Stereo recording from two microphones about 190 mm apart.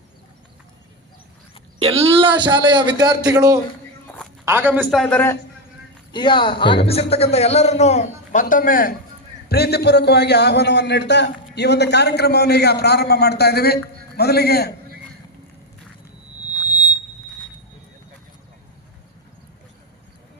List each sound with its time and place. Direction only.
2.0 s a man's voice: 30° right (ahead or behind); by 4.8 s 10° right (ahead or behind)
4.8 s a man's voice: centre (ahead or behind)
6.1 s a man's voice: 25° left (ahead or behind); by 9.0 s 45° left (ahead or behind)
9.5 s a man's voice: 60° left (ahead or behind)